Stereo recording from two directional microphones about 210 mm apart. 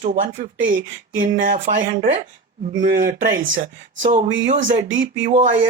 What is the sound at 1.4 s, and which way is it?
Speech, 40° right (ahead or behind).